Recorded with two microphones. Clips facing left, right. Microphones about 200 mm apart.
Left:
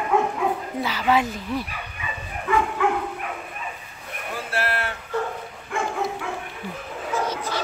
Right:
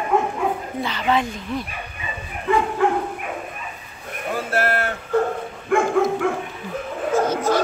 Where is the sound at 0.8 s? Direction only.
5° left (ahead or behind).